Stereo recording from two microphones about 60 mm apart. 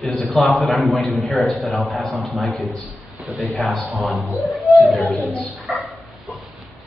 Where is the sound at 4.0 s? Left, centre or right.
Centre.